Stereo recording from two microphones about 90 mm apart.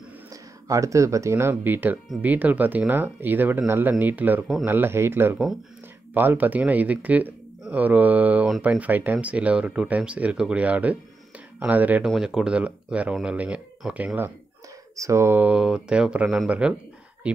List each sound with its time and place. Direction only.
0.3 s speech: 40° right (ahead or behind); by 12.0 s 20° right (ahead or behind)
12.0 s speech: 5° right (ahead or behind)
15.0 s speech: 35° right (ahead or behind)
15.3 s speech: 15° right (ahead or behind)